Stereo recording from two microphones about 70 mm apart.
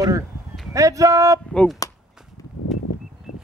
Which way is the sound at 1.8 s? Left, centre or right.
Left.